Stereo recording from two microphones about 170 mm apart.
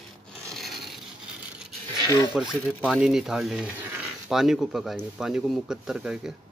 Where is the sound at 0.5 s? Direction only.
Centre (ahead or behind).